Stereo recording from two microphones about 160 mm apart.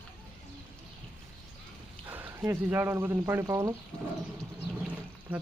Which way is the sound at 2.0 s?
15° right (ahead or behind).